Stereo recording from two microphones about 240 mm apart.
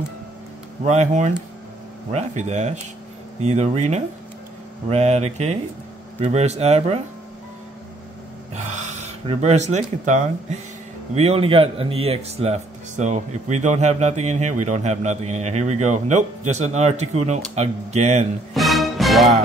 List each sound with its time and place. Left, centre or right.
0.8 s a man's voice: right
8.5 s a man's voice: right
18.5 s music: centre